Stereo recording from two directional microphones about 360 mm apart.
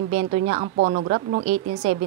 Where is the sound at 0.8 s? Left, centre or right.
Right.